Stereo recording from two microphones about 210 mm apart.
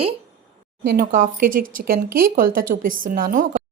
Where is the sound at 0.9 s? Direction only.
45° right (ahead or behind).